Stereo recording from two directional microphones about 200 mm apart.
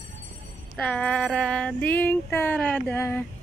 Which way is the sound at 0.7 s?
5° left (ahead or behind).